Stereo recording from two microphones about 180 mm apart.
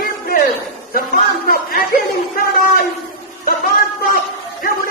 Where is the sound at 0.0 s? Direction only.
55° left (ahead or behind).